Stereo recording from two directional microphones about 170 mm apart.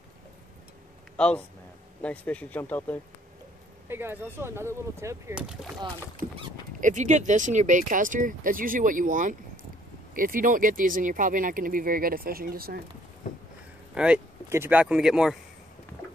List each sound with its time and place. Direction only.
1.1 s speech: 5° left (ahead or behind)
3.9 s speech: 15° right (ahead or behind)
5.3 s speech: 5° right (ahead or behind)
6.8 s speech: 45° right (ahead or behind)
13.9 s speech: 5° right (ahead or behind)